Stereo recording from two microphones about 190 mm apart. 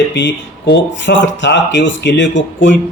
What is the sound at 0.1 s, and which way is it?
Speech, 65° left (ahead or behind).